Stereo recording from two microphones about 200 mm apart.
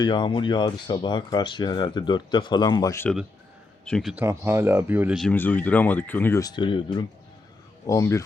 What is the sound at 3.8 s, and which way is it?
Speech, centre (ahead or behind).